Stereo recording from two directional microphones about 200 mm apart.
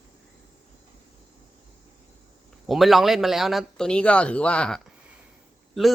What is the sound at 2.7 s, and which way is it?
Speech, centre (ahead or behind).